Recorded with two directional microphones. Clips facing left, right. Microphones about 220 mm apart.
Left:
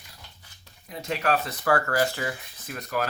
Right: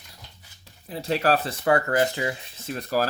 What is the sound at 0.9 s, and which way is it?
Speech, 30° right (ahead or behind).